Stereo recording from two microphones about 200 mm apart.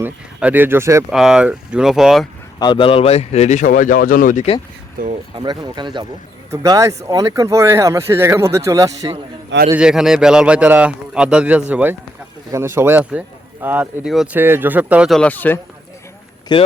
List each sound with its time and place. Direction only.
0.0 s speech: 10° right (ahead or behind)
1.1 s a man's voice: centre (ahead or behind)
2.6 s a man's voice: 25° left (ahead or behind); by 4.4 s 40° left (ahead or behind)
5.4 s speech: 20° right (ahead or behind)
9.6 s a man's voice: 5° right (ahead or behind)
16.5 s speech: 25° left (ahead or behind)